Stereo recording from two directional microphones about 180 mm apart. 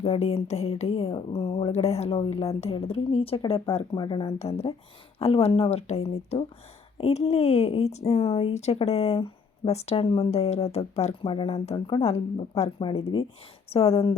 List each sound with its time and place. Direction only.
0.0 s speech: 35° left (ahead or behind)